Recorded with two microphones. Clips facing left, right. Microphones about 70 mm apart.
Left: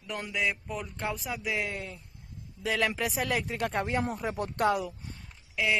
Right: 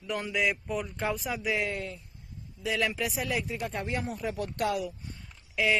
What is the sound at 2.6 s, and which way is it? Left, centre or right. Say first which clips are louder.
Speech: left 1 dB; left.